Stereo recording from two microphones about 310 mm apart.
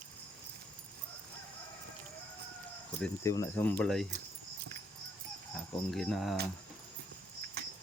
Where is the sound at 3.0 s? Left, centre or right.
Centre.